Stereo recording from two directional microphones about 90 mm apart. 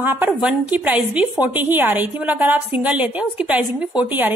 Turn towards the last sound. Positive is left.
turn(degrees=-20)  # may be behind; listen again after turning